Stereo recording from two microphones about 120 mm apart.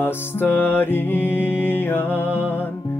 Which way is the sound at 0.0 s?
20° left (ahead or behind).